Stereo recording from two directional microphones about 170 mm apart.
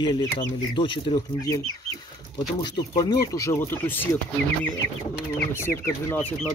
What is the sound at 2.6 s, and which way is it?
Speech, 25° left (ahead or behind).